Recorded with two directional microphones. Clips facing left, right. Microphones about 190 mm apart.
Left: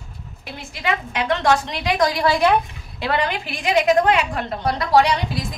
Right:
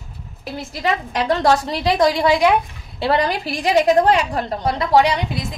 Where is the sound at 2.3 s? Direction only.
10° right (ahead or behind).